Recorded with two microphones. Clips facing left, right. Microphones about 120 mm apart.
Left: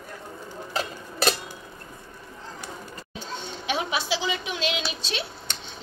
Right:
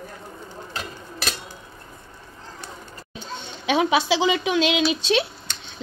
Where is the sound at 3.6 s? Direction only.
80° right.